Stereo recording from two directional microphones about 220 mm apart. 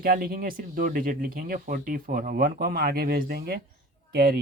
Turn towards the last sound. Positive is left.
turn(degrees=-45)  # may be behind; listen again after turning